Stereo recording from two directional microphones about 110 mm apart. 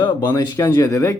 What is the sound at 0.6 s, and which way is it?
Speech, 20° left (ahead or behind).